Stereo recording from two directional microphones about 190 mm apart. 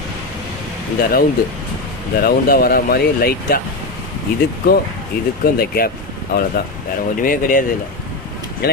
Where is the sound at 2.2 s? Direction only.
50° left (ahead or behind).